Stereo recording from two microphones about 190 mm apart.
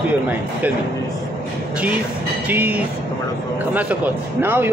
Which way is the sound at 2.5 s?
10° right (ahead or behind).